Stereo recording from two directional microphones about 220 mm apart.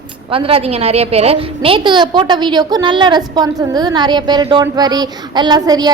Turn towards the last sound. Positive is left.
turn(degrees=-20)  # may be behind; listen again after turning